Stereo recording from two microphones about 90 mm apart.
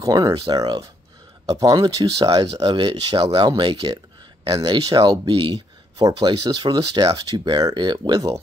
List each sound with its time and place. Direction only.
0.0 s speech: 40° right (ahead or behind)
2.5 s speech: 70° right (ahead or behind)
3.2 s speech: 90° right
3.4 s speech: 60° right (ahead or behind)
4.5 s speech: 45° right (ahead or behind)
5.3 s a sound: 65° right (ahead or behind)
6.2 s speech: 55° right (ahead or behind)